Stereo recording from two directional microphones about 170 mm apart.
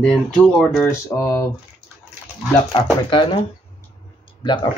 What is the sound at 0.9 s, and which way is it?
Mantra, 20° left (ahead or behind).